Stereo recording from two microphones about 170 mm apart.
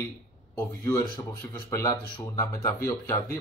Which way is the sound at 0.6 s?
15° left (ahead or behind).